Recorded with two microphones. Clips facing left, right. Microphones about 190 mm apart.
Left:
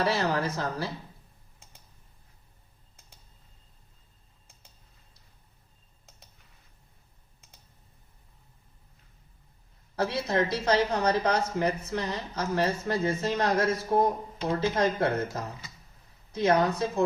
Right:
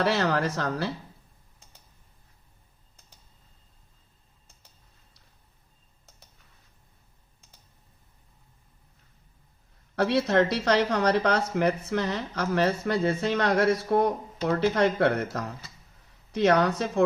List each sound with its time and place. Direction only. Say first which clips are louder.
0.0 s speech: right 2 dB; 70° right (ahead or behind)
9.9 s speech: right 5 dB; 70° right (ahead or behind)